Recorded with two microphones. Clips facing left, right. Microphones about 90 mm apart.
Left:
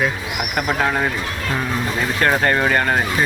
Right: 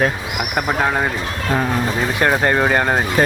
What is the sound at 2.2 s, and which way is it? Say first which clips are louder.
Speech: right 1 dB; 15° right (ahead or behind).